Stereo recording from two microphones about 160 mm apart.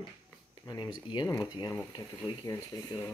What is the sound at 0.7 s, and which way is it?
Speech, 30° left (ahead or behind).